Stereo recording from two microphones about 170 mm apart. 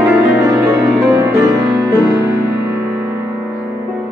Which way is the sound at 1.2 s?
20° right (ahead or behind).